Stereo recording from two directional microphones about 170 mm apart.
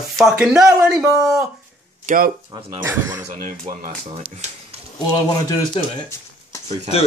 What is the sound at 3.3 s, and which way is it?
Speech, 45° right (ahead or behind).